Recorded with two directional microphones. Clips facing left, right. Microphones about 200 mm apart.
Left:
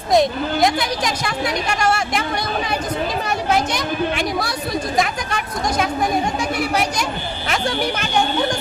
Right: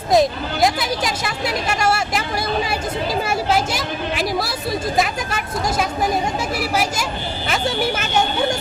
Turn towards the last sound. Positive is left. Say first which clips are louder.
# left 1 dB
turn(degrees=-5)  # may be behind; listen again after turning